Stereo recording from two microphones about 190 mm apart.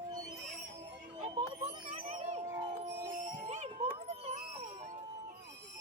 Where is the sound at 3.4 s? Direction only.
35° right (ahead or behind).